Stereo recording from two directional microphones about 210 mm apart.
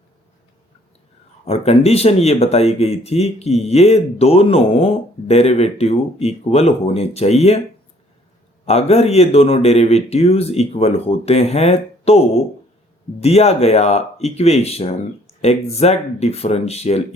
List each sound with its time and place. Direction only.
1.5 s speech: 30° left (ahead or behind)
8.6 s speech: 30° left (ahead or behind)